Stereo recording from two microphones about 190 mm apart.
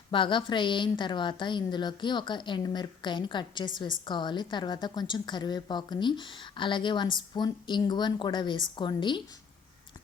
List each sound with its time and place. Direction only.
0.1 s a woman's voice: 25° left (ahead or behind)